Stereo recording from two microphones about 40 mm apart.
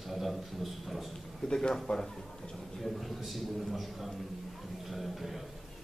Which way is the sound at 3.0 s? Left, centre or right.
Centre.